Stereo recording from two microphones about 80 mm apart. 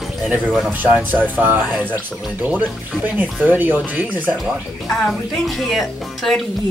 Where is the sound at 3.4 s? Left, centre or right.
Right.